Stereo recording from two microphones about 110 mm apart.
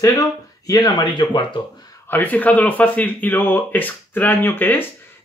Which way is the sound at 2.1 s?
15° left (ahead or behind).